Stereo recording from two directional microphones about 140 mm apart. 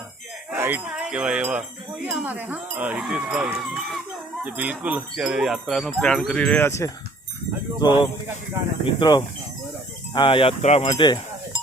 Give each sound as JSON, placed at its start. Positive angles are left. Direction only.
{"t": 0.5, "sound": "speech", "side_deg": -15}
{"t": 4.4, "sound": "wind chime", "side_deg": -10}
{"t": 7.8, "sound": "speech", "side_deg": 30}
{"t": 10.6, "sound": "speech", "side_deg": 50}
{"t": 10.8, "sound": "chink", "side_deg": 30}